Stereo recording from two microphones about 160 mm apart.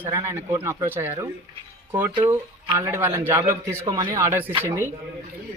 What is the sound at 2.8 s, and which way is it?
Speech, 15° right (ahead or behind).